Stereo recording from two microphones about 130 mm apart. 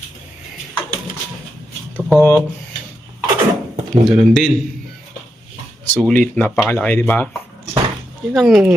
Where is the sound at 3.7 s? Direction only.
50° right (ahead or behind).